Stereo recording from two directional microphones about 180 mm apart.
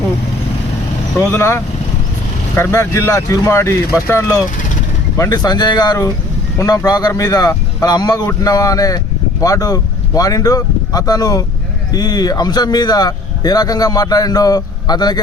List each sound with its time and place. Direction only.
1.2 s speech: 15° left (ahead or behind)